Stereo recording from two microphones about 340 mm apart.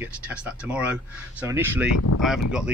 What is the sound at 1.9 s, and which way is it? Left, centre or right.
Speech, left.